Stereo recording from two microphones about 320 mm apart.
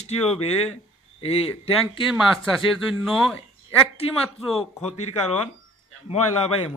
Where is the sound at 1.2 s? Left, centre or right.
Centre.